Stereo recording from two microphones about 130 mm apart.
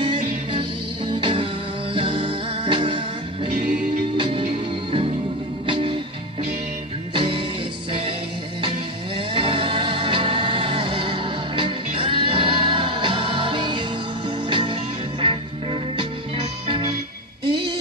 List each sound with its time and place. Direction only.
0.0 s music: 40° right (ahead or behind)
4.2 s music: 45° right (ahead or behind)
5.7 s music: 40° right (ahead or behind)
7.2 s music: 40° right (ahead or behind)
9.3 s music: 40° right (ahead or behind)
16.6 s music: 40° right (ahead or behind)